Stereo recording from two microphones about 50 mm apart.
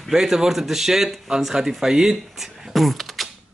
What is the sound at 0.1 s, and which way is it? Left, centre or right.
Speech, centre.